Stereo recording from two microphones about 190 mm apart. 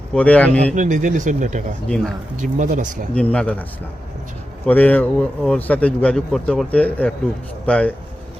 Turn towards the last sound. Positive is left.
turn(degrees=5)  # may be behind; listen again after turning